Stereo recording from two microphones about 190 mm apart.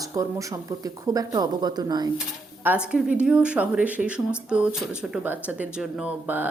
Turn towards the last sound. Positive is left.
turn(degrees=-10)  # may be behind; listen again after turning